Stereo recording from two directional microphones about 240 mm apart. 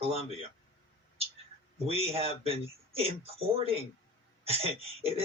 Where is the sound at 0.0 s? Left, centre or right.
Right.